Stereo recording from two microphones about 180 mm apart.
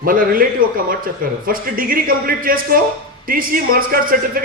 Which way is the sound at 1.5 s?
55° right (ahead or behind).